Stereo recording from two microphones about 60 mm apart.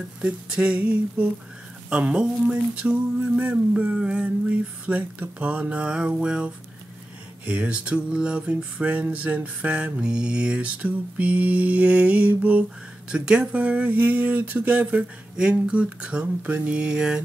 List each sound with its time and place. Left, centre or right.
0.2 s mantra: centre
16.5 s speech: right